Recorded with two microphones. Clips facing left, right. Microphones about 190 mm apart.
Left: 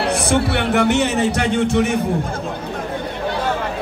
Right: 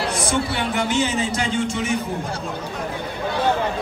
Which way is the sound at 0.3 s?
65° left (ahead or behind).